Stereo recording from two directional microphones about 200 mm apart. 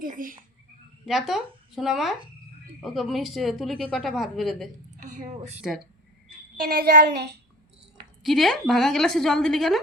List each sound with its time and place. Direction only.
0.0 s child singing: 45° right (ahead or behind)
1.0 s a woman's voice: centre (ahead or behind)
4.9 s a woman's voice: 40° right (ahead or behind)
6.6 s child singing: 50° right (ahead or behind)
8.2 s a woman's voice: centre (ahead or behind)